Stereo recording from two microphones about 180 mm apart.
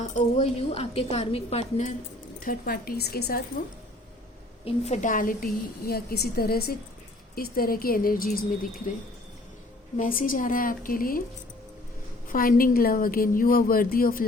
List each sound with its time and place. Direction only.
0.0 s speech: 35° left (ahead or behind)
2.4 s a woman's voice: 55° left (ahead or behind)
4.6 s a woman's voice: 40° left (ahead or behind)
10.0 s a woman's voice: 50° left (ahead or behind)
12.3 s a woman's voice: 50° left (ahead or behind)